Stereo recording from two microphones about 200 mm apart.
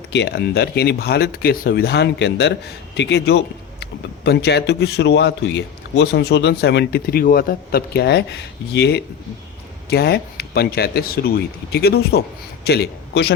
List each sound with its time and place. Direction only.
0.1 s a man's voice: 60° left (ahead or behind)